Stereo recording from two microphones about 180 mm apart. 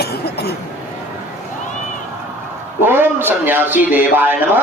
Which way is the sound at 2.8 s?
10° right (ahead or behind).